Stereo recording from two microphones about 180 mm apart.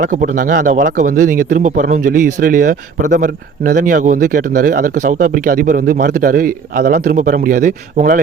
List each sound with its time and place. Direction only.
0.0 s speech: 45° right (ahead or behind)